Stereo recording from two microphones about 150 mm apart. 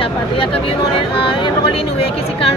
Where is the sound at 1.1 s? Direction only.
35° left (ahead or behind).